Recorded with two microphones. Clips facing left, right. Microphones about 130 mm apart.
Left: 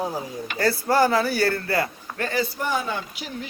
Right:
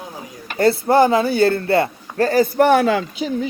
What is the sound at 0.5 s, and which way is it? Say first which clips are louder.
Speech: right 7 dB; 25° right (ahead or behind).